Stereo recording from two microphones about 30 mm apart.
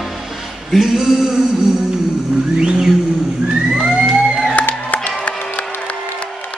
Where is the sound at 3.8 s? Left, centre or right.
Right.